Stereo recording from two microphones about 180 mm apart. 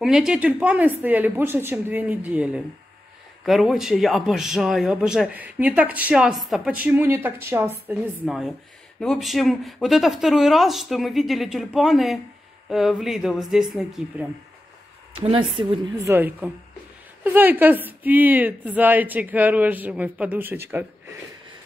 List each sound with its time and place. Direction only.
0.0 s a man's voice: 5° right (ahead or behind)
15.1 s speech: 30° right (ahead or behind); by 20.8 s 10° right (ahead or behind)